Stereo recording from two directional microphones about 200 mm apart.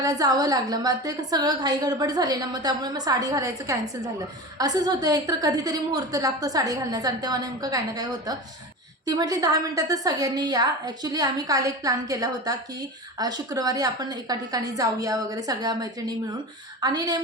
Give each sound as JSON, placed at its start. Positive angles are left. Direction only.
{"t": 0.0, "sound": "a woman's voice", "side_deg": -20}